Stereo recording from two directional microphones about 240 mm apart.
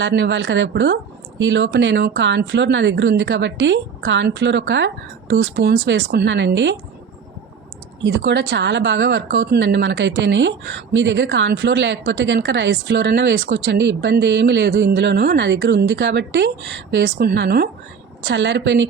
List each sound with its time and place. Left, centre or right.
0.0 s a woman's voice: right
8.0 s a woman's voice: right